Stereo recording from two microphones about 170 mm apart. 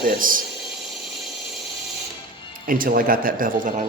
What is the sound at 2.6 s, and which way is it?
Speech, 55° right (ahead or behind).